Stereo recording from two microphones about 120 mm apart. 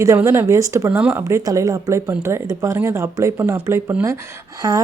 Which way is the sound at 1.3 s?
25° right (ahead or behind).